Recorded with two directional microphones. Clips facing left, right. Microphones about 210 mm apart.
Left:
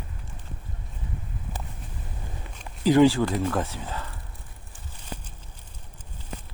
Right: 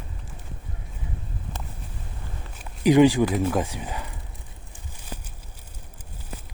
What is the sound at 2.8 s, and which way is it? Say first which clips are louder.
Speech: right 2 dB; 15° right (ahead or behind).